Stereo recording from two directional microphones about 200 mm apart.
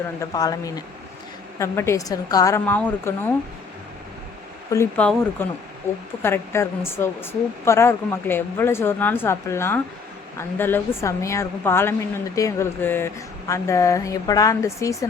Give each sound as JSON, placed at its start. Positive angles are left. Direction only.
{"t": 0.2, "sound": "speech", "side_deg": 20}
{"t": 4.7, "sound": "speech", "side_deg": 10}